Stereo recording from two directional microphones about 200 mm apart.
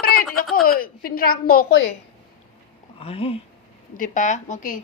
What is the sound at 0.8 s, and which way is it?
A woman's voice, 45° left (ahead or behind).